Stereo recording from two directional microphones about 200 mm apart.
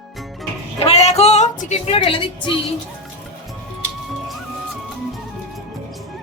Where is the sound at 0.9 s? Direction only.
30° left (ahead or behind).